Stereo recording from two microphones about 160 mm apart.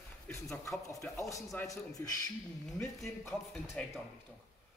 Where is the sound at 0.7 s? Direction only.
15° left (ahead or behind).